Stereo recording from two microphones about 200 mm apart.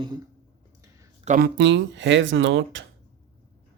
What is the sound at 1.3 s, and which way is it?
Speech, 50° right (ahead or behind).